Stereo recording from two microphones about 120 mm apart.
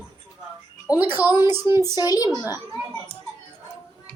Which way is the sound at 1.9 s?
30° left (ahead or behind).